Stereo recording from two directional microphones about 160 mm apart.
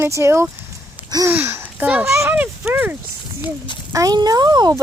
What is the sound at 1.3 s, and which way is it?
A woman's voice, 10° right (ahead or behind).